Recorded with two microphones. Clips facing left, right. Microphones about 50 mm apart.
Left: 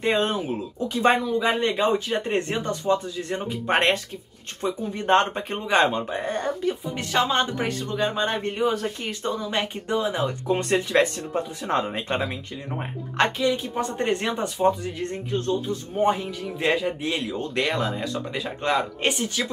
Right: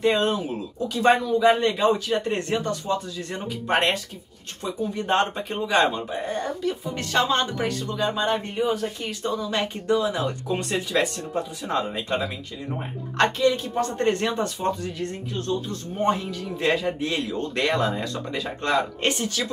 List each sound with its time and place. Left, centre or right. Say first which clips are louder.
0.0 s speech: right 1 dB; left
5.0 s speech: left 3 dB; left
5.3 s speech: even; left
7.0 s speech: right 1 dB; centre
7.9 s speech: right 1 dB; left
8.5 s speech: left 1 dB; left
9.2 s speech: right 1 dB; left
10.5 s speech: left 5 dB; left
13.2 s a man's voice: right 2 dB; centre
15.0 s speech: left 2 dB; left
15.7 s a man's voice: left 1 dB; centre